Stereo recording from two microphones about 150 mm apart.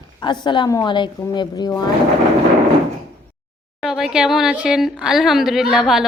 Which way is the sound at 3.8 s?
Centre (ahead or behind).